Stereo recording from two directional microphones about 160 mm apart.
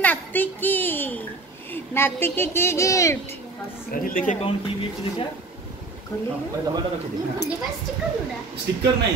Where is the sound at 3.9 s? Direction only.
55° left (ahead or behind).